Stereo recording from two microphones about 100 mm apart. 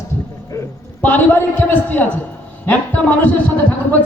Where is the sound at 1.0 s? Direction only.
20° left (ahead or behind).